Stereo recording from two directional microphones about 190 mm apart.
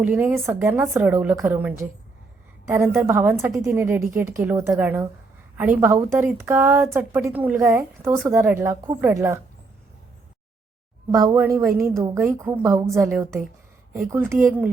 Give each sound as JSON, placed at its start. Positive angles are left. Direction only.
{"t": 0.0, "sound": "a woman's voice", "side_deg": -5}
{"t": 11.1, "sound": "a woman's voice", "side_deg": -15}